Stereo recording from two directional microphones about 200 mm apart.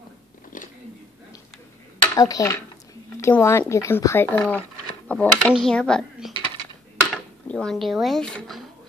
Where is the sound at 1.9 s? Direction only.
15° left (ahead or behind).